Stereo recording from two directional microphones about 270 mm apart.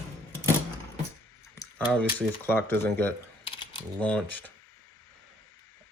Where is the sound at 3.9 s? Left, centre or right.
Centre.